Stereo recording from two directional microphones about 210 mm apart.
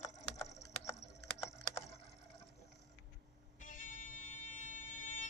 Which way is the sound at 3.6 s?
40° left (ahead or behind).